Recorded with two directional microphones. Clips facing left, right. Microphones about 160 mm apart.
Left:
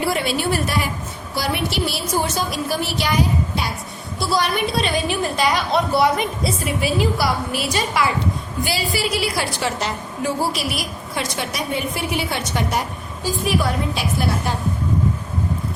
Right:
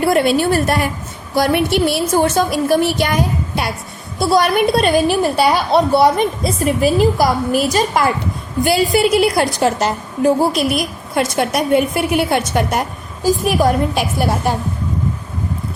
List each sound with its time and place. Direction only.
0.0 s a woman's voice: 50° right (ahead or behind); by 6.2 s 30° right (ahead or behind)
6.4 s a woman's voice: 45° right (ahead or behind)
8.6 s a woman's voice: centre (ahead or behind)
9.1 s a woman's voice: 50° right (ahead or behind)
13.2 s a woman's voice: 45° right (ahead or behind)